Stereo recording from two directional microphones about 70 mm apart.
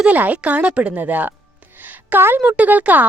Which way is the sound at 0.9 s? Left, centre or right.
Right.